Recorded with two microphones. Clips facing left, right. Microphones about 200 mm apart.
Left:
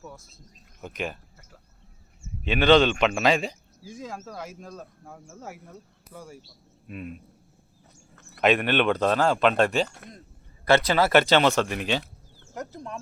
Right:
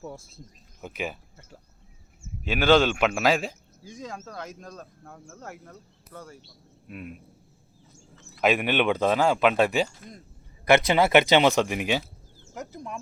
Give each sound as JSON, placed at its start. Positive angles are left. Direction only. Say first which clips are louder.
{"t": 0.0, "sound": "speech", "louder": "right 5 dB", "side_deg": -25}
{"t": 0.8, "sound": "speech", "louder": "even", "side_deg": -10}
{"t": 2.4, "sound": "speech", "louder": "left 2 dB", "side_deg": -5}
{"t": 6.8, "sound": "speech", "louder": "left 2 dB", "side_deg": -5}
{"t": 8.1, "sound": "a sound", "louder": "right 2 dB", "side_deg": 60}
{"t": 8.4, "sound": "speech", "louder": "left 1 dB", "side_deg": -5}
{"t": 10.7, "sound": "speech", "louder": "right 1 dB", "side_deg": -20}